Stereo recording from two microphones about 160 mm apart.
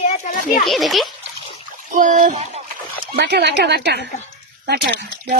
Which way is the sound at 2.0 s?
55° right (ahead or behind).